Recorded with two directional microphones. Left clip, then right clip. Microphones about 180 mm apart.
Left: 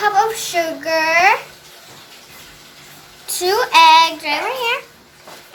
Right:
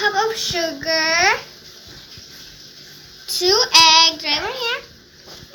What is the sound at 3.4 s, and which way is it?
Child singing, 10° left (ahead or behind).